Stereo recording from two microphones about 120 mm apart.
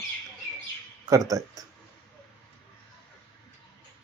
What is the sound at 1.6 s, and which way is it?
Speech, 30° right (ahead or behind).